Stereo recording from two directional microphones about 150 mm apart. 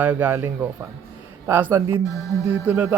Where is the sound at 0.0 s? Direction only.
10° right (ahead or behind).